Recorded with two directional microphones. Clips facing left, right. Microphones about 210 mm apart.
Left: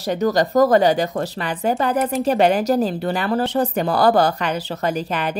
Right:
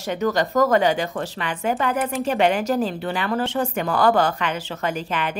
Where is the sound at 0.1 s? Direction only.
35° left (ahead or behind).